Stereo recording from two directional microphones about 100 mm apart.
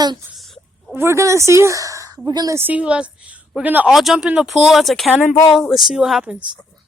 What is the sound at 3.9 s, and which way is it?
Speech, 5° right (ahead or behind).